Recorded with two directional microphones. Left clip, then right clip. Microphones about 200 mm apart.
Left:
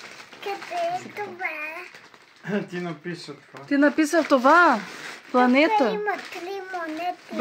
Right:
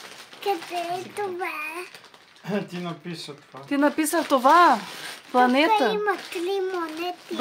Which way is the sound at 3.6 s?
10° left (ahead or behind).